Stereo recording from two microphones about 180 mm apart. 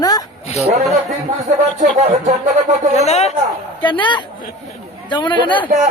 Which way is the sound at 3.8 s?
25° left (ahead or behind).